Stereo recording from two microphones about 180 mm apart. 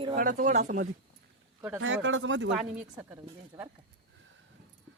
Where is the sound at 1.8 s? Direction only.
90° right.